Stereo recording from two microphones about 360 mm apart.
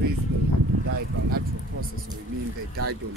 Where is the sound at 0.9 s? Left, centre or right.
Right.